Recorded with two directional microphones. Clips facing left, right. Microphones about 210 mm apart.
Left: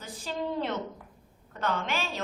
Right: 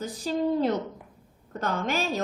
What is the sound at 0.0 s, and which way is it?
A woman's voice, 40° right (ahead or behind).